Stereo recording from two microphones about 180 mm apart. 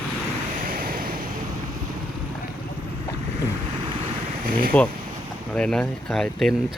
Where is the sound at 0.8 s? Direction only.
50° right (ahead or behind).